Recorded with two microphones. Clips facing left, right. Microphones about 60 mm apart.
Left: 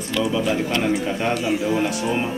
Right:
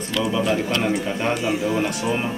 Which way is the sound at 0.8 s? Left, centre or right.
Centre.